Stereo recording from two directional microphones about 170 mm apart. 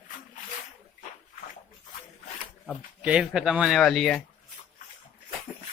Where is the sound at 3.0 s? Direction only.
5° right (ahead or behind).